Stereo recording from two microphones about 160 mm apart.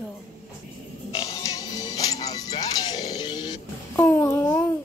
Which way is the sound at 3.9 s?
10° left (ahead or behind).